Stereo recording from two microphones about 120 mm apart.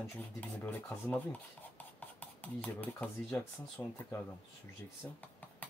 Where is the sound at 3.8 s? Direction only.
25° left (ahead or behind).